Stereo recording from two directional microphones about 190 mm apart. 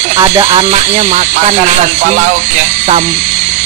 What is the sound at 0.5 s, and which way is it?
Speech, 35° right (ahead or behind).